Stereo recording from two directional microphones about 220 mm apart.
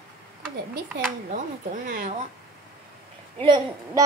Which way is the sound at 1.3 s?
35° right (ahead or behind).